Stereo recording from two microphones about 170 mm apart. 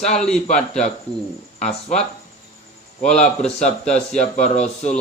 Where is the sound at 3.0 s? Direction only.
5° left (ahead or behind).